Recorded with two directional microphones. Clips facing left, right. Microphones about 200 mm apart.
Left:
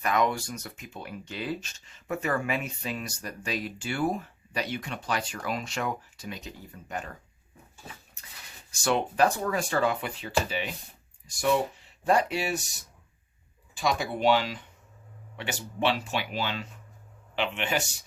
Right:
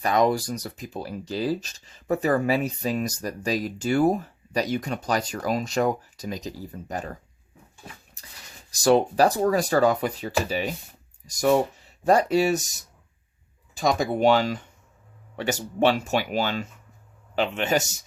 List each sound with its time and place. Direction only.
0.0 s speech: 35° right (ahead or behind)
8.2 s a sound: 35° right (ahead or behind)
8.7 s speech: 35° right (ahead or behind)
13.7 s speech: 45° right (ahead or behind)